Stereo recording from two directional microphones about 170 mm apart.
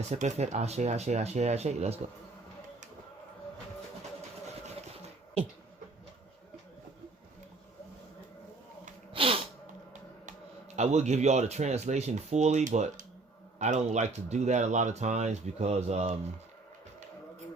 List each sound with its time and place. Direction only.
0.1 s speech: 45° right (ahead or behind)
9.1 s sneeze: 30° right (ahead or behind)
10.8 s speech: 40° right (ahead or behind)